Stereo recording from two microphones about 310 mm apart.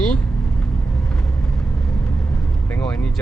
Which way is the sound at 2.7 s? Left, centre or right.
Centre.